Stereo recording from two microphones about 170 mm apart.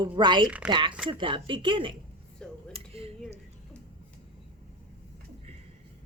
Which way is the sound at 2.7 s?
35° right (ahead or behind).